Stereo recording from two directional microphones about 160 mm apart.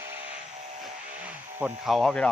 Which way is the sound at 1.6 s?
Centre (ahead or behind).